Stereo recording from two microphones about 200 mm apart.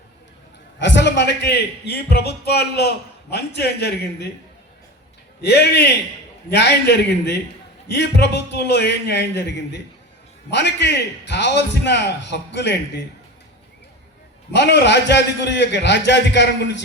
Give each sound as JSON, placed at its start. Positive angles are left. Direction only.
{"t": 0.8, "sound": "a man's voice", "side_deg": 60}
{"t": 5.4, "sound": "a man's voice", "side_deg": 55}
{"t": 14.5, "sound": "a man's voice", "side_deg": 60}